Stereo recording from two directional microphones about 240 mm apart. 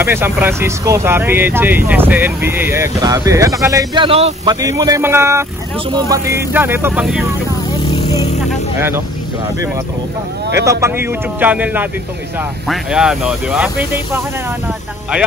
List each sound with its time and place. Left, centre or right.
0.0 s speech: centre
7.9 s a sound: centre
8.7 s speech: centre
10.5 s speech: centre